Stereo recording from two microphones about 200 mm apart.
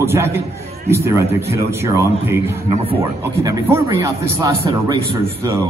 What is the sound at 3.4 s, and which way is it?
Speech, 15° right (ahead or behind).